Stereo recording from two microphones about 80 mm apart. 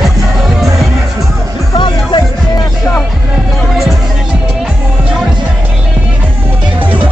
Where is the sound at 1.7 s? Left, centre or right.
Left.